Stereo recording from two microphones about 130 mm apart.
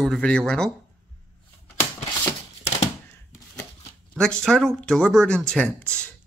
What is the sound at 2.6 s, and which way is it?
Typewriter, 60° left (ahead or behind).